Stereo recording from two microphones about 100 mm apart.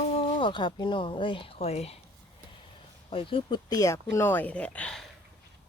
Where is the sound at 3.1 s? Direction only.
65° left (ahead or behind).